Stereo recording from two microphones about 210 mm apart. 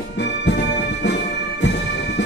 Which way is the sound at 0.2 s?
55° left (ahead or behind).